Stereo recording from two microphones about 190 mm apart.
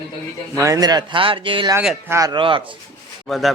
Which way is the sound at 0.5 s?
15° right (ahead or behind).